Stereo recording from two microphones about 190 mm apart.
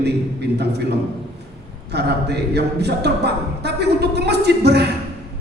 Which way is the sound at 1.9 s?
60° right (ahead or behind).